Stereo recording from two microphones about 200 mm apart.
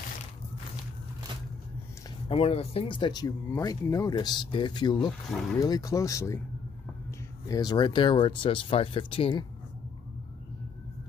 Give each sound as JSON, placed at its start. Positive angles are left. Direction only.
{"t": 2.2, "sound": "speech", "side_deg": 30}
{"t": 7.4, "sound": "speech", "side_deg": 20}